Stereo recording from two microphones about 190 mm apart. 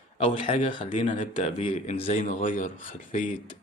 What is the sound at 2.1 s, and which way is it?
Speech, 45° left (ahead or behind).